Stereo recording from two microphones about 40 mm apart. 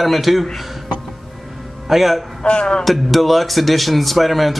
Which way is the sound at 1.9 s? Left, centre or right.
Centre.